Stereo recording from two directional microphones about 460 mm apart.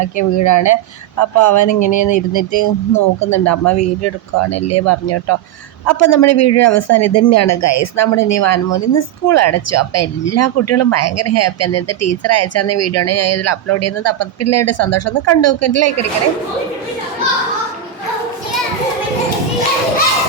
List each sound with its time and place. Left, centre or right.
0.0 s speech: left